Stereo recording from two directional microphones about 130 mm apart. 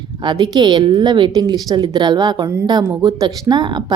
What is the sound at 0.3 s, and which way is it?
A woman's voice, 35° right (ahead or behind).